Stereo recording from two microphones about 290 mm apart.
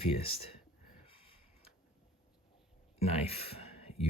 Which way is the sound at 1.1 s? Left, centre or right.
Centre.